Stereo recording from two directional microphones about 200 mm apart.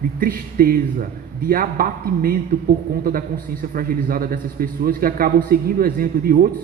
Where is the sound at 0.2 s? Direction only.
45° right (ahead or behind).